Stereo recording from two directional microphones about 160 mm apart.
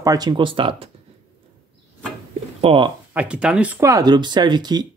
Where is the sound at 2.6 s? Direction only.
35° right (ahead or behind).